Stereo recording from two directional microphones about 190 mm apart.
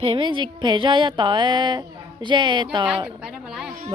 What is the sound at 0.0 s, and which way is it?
A woman's voice, 25° right (ahead or behind).